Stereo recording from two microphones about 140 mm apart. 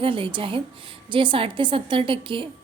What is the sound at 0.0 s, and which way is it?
A woman's voice, 40° right (ahead or behind).